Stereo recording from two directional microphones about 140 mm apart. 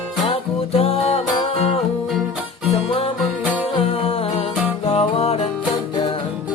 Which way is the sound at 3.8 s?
40° left (ahead or behind).